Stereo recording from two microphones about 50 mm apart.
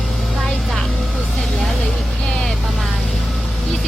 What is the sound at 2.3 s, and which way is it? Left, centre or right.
Vehicle, centre.